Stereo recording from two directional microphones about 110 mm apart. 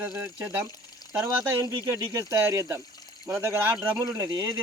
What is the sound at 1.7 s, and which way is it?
Speech, 30° right (ahead or behind).